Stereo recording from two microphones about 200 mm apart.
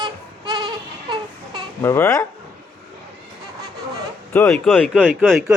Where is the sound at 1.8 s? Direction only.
10° left (ahead or behind).